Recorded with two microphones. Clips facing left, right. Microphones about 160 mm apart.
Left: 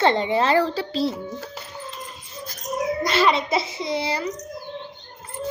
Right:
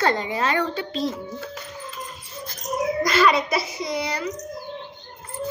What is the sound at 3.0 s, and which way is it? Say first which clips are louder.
A child's voice: right 1 dB; 25° left (ahead or behind).